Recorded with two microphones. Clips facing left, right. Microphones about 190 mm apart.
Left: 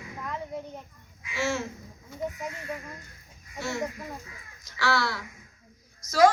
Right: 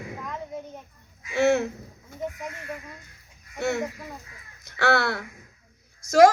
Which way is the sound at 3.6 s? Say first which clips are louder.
Right 5 dB; 60° right (ahead or behind).